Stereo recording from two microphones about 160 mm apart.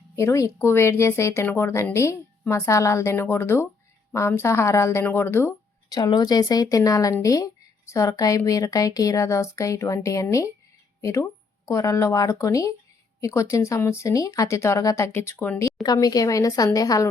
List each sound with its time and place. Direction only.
0.2 s speech: 20° left (ahead or behind)